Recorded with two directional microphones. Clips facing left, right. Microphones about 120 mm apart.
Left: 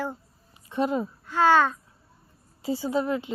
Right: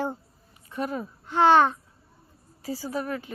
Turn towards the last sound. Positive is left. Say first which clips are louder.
# left 5 dB
turn(degrees=25)  # may be behind; listen again after turning